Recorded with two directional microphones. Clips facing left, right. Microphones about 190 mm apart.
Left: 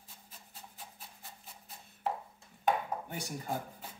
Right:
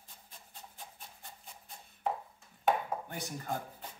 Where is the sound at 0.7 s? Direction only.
5° left (ahead or behind).